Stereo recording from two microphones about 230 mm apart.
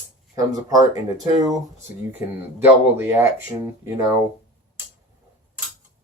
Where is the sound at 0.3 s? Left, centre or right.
Centre.